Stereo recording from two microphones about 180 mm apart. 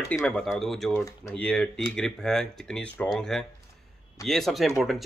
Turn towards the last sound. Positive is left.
turn(degrees=0)  # may be behind; listen again after turning